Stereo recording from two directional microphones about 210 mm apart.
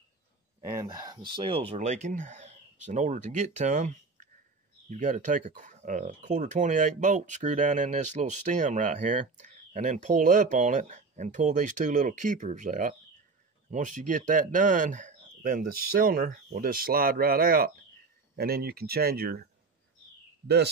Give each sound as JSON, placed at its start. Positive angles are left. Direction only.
{"t": 0.7, "sound": "speech", "side_deg": -15}